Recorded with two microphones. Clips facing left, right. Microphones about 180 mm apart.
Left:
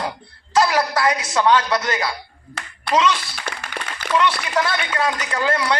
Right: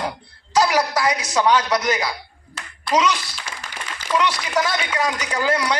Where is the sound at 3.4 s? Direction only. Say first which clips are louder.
Left 4 dB; 65° left (ahead or behind).